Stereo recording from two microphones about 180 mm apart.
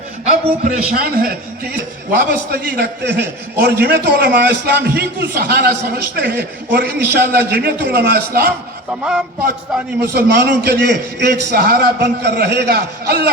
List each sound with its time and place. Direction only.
0.3 s a man's voice: 45° right (ahead or behind)
8.9 s speech: 5° right (ahead or behind)
10.0 s a man's voice: 65° right (ahead or behind)